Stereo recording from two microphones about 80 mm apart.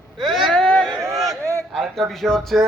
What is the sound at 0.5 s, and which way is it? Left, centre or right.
Speech, centre.